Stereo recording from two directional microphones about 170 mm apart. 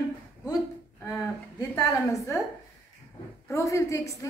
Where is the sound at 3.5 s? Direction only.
20° left (ahead or behind).